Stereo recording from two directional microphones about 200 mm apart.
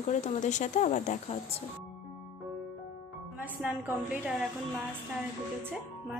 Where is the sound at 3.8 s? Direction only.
5° right (ahead or behind).